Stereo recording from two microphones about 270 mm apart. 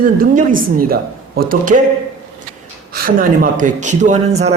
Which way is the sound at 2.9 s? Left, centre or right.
Right.